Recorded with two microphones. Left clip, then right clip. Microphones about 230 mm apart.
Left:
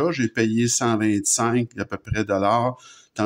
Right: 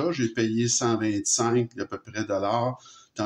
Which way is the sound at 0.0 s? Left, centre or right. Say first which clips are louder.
Left 4 dB; left.